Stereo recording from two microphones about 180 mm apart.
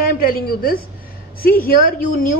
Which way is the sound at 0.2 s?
55° left (ahead or behind).